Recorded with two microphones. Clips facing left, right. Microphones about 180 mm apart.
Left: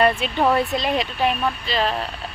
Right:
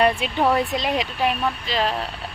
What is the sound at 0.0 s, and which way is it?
Speech, 15° right (ahead or behind).